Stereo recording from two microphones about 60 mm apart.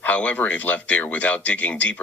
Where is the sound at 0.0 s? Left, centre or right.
Left.